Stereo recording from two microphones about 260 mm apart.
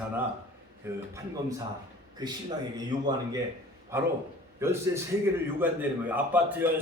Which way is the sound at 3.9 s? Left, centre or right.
Centre.